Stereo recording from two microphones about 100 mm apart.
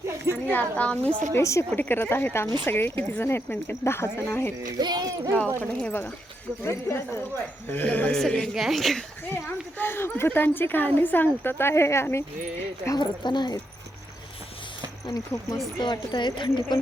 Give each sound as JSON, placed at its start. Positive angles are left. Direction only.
{"t": 0.5, "sound": "a woman's voice", "side_deg": 15}
{"t": 1.3, "sound": "a woman's voice", "side_deg": 30}
{"t": 4.8, "sound": "speech", "side_deg": -45}
{"t": 5.5, "sound": "a woman's voice", "side_deg": 20}
{"t": 9.3, "sound": "a woman's voice", "side_deg": 20}
{"t": 13.0, "sound": "speech", "side_deg": 45}
{"t": 15.0, "sound": "speech", "side_deg": 35}
{"t": 15.8, "sound": "speech", "side_deg": 50}